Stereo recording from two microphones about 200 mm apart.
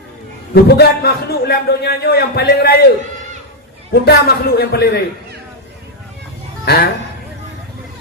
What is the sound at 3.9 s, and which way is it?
A man's voice, 50° left (ahead or behind).